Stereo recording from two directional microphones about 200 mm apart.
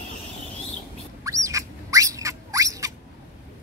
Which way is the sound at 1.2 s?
15° right (ahead or behind).